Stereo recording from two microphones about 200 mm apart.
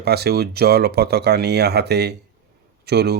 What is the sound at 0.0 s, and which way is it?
Speech, 50° right (ahead or behind).